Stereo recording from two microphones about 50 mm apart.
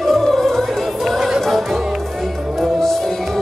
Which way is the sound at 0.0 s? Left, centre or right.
Centre.